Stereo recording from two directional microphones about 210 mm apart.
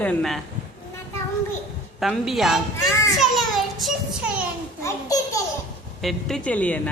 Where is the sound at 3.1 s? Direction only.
Centre (ahead or behind).